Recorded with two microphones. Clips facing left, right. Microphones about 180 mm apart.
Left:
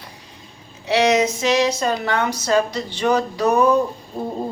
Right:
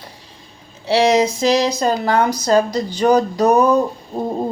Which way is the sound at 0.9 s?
30° right (ahead or behind).